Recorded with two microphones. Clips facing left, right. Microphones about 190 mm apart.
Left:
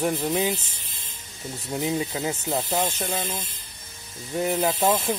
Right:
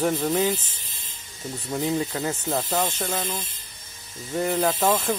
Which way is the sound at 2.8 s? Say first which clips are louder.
Even; 20° left (ahead or behind).